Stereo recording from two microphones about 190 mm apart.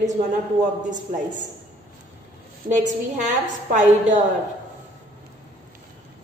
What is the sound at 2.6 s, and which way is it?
A woman's voice, 40° right (ahead or behind).